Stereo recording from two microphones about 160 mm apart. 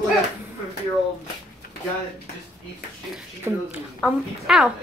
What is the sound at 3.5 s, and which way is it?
Speech, 15° right (ahead or behind).